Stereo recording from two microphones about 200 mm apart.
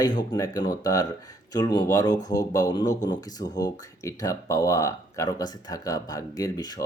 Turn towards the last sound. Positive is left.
turn(degrees=20)  # may be behind; listen again after turning